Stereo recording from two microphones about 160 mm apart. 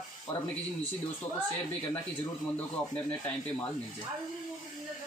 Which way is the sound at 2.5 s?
10° left (ahead or behind).